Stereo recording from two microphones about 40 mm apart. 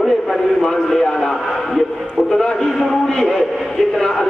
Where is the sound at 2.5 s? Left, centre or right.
Centre.